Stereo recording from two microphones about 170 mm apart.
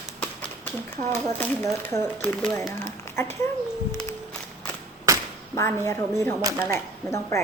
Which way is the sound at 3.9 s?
15° left (ahead or behind).